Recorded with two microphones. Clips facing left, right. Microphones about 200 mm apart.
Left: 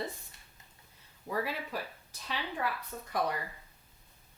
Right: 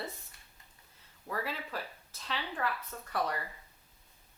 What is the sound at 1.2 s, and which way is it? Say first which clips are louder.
Speech: left 3 dB; 15° left (ahead or behind).